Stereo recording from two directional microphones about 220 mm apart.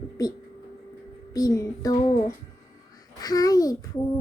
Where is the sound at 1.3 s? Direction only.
15° left (ahead or behind).